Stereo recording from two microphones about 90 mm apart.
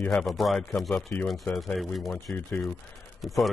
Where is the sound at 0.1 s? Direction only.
5° left (ahead or behind).